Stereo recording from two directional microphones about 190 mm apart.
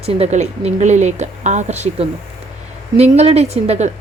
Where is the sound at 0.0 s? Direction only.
30° right (ahead or behind).